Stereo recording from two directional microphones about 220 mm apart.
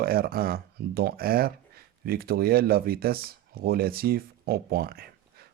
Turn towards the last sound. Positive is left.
turn(degrees=-45)  # may be behind; listen again after turning